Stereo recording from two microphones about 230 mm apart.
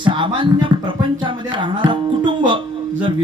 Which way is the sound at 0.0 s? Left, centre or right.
Right.